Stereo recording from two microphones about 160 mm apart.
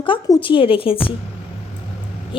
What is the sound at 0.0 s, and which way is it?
Speech, 30° left (ahead or behind).